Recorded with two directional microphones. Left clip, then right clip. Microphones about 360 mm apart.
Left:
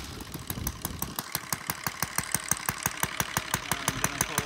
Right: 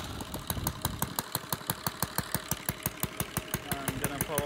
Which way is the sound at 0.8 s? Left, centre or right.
Centre.